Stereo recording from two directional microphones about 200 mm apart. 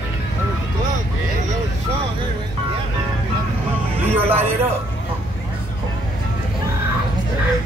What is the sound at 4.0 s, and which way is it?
Speech, 10° right (ahead or behind).